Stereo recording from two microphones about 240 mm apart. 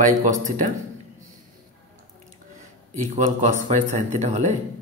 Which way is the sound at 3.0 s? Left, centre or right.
Right.